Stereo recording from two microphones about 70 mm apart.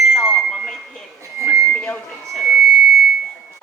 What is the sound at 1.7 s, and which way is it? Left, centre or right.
Reversing beeps, centre.